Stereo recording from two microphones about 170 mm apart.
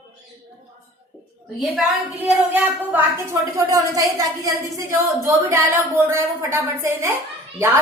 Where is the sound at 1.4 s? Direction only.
Centre (ahead or behind).